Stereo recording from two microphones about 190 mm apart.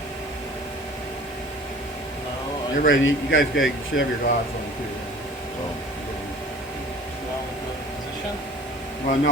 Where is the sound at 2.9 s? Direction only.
90° left.